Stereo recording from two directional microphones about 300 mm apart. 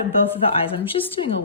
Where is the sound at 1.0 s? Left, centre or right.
Left.